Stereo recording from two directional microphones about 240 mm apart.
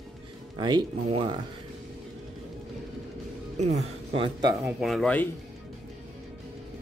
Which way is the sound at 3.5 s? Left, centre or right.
Right.